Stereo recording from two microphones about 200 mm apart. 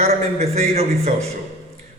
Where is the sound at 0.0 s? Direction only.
30° right (ahead or behind).